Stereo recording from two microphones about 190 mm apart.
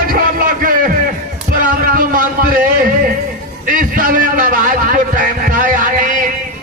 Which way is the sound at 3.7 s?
45° right (ahead or behind).